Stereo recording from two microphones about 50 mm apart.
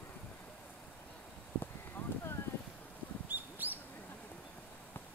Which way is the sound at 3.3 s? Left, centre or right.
Right.